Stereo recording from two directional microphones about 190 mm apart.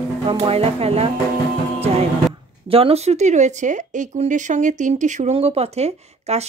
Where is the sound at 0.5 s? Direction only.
30° right (ahead or behind).